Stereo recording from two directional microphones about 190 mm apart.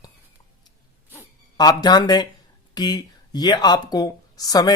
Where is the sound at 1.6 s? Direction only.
20° left (ahead or behind).